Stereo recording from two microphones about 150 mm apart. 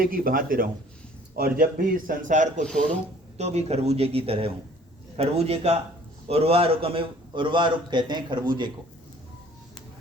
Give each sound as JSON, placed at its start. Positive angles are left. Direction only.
{"t": 0.0, "sound": "a man's voice", "side_deg": -70}
{"t": 2.6, "sound": "speech", "side_deg": 5}
{"t": 3.3, "sound": "a man's voice", "side_deg": -45}